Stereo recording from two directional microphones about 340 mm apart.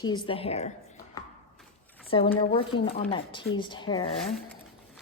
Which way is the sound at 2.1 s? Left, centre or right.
Centre.